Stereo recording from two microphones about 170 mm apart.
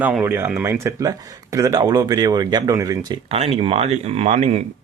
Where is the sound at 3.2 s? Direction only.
35° right (ahead or behind).